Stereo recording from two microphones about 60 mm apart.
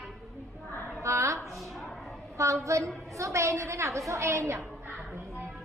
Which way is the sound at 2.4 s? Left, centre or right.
Right.